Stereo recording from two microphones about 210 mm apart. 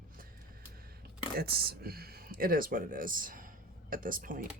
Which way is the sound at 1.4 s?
50° right (ahead or behind).